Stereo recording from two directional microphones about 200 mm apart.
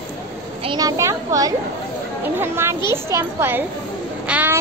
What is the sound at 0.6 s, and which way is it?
A child's voice, 20° right (ahead or behind).